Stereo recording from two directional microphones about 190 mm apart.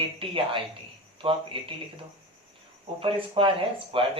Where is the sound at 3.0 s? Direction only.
30° right (ahead or behind).